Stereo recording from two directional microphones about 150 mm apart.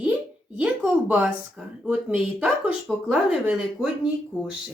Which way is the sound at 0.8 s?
10° right (ahead or behind).